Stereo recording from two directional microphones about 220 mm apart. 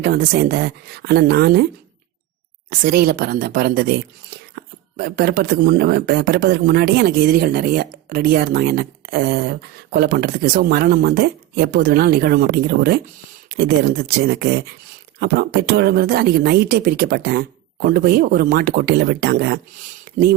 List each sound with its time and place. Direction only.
0.0 s speech: 40° right (ahead or behind)
2.6 s speech: 45° right (ahead or behind)
20.1 s a sound: 40° right (ahead or behind)